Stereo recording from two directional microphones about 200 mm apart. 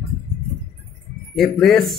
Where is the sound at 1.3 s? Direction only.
Centre (ahead or behind).